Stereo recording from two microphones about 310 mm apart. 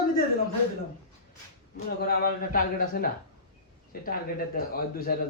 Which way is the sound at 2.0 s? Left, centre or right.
Left.